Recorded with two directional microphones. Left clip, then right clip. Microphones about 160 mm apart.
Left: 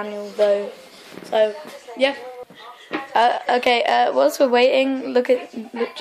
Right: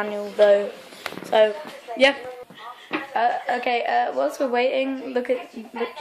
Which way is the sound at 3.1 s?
60° left (ahead or behind).